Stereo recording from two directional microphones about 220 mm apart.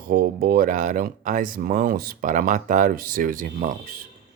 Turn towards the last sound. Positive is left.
turn(degrees=-40)  # may be behind; listen again after turning